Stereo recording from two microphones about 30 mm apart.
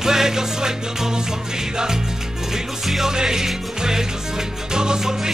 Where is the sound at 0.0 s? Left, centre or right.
Centre.